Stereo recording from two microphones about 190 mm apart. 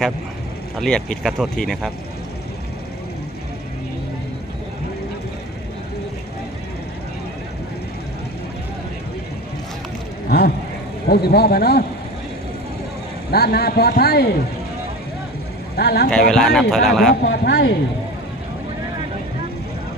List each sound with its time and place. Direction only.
0.8 s speech: 5° left (ahead or behind)
10.2 s vehicle: 55° left (ahead or behind)
11.1 s a man's voice: 55° left (ahead or behind)
13.3 s a man's voice: 55° left (ahead or behind)
15.7 s speech: 55° left (ahead or behind)
16.0 s speech: 5° left (ahead or behind)
17.2 s a man's voice: 60° left (ahead or behind)